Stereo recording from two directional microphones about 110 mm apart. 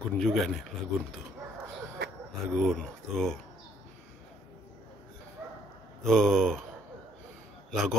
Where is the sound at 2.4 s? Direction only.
5° left (ahead or behind).